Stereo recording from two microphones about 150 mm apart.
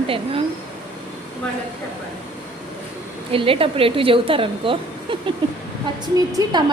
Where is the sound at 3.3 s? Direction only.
35° right (ahead or behind).